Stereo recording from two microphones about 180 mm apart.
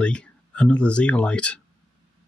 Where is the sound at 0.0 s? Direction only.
5° left (ahead or behind).